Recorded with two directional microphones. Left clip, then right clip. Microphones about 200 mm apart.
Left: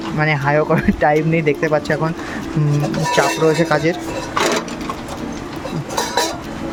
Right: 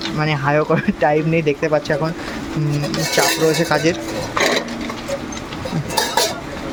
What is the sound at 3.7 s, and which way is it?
Speech, 10° left (ahead or behind).